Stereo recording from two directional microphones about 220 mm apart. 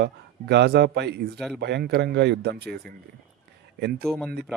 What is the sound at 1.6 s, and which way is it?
A man's voice, 50° right (ahead or behind).